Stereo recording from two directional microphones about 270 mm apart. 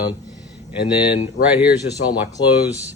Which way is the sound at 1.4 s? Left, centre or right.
Centre.